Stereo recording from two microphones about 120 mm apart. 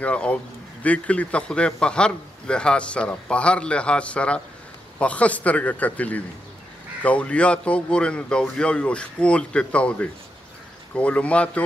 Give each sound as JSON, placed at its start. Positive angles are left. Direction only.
{"t": 0.0, "sound": "a man's voice", "side_deg": 10}